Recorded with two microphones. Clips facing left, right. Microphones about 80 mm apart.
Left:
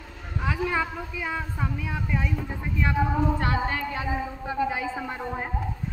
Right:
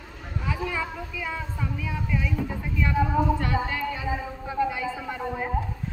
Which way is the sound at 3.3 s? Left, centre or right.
Left.